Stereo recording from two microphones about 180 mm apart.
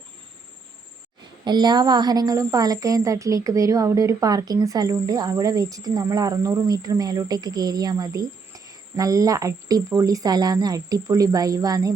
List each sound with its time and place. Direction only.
1.5 s speech: 25° right (ahead or behind)